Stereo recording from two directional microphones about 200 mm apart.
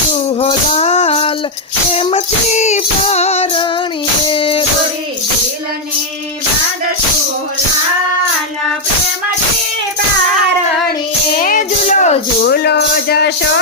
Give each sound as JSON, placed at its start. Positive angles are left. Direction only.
{"t": 0.3, "sound": "music", "side_deg": 30}
{"t": 11.3, "sound": "music", "side_deg": 40}
{"t": 12.5, "sound": "music", "side_deg": 55}